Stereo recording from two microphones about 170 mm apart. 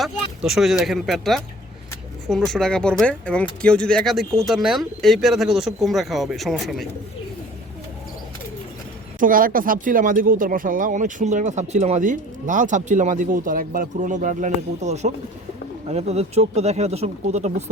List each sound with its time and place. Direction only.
0.0 s speech: centre (ahead or behind)
9.2 s speech: 55° right (ahead or behind); by 17.5 s 40° right (ahead or behind)